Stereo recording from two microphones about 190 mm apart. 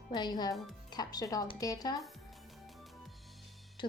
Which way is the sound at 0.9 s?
20° left (ahead or behind).